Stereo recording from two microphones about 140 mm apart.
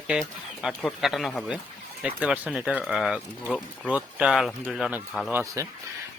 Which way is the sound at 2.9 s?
Centre (ahead or behind).